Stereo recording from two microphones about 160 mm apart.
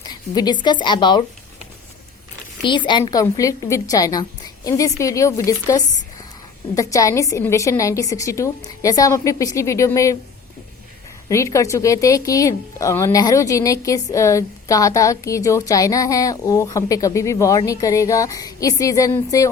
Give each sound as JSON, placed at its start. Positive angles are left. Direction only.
{"t": 0.0, "sound": "a woman's voice", "side_deg": 25}
{"t": 2.6, "sound": "speech", "side_deg": 30}
{"t": 11.3, "sound": "speech", "side_deg": 20}